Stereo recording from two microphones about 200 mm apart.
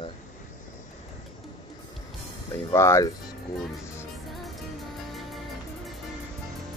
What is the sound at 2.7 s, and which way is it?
Speech, 15° left (ahead or behind).